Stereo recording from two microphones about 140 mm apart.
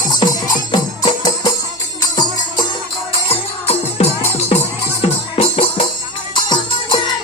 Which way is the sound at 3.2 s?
45° left (ahead or behind).